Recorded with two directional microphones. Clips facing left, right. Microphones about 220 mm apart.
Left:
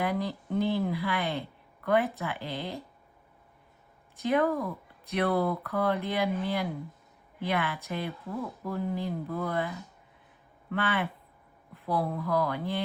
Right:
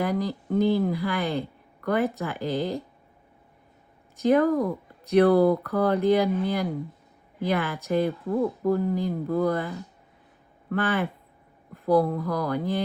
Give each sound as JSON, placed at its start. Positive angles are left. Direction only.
{"t": 0.0, "sound": "speech", "side_deg": -40}
{"t": 4.3, "sound": "speech", "side_deg": -40}